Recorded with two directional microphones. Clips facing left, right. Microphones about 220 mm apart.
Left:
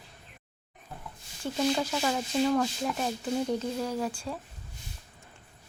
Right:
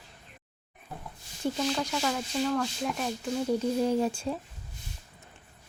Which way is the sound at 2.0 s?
15° left (ahead or behind).